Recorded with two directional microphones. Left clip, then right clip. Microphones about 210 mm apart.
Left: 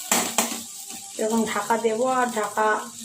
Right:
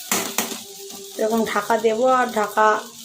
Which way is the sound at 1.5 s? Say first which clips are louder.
Right 4 dB; 15° right (ahead or behind).